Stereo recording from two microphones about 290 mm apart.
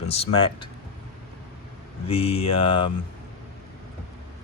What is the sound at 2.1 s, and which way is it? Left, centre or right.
Speech, left.